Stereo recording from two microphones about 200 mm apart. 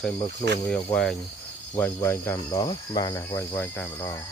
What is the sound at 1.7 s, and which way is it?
Speech, 15° left (ahead or behind).